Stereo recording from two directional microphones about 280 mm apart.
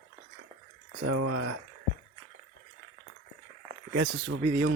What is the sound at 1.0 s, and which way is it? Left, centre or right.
Speech, right.